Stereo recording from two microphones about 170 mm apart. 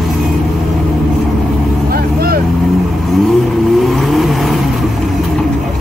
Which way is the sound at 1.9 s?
60° right (ahead or behind).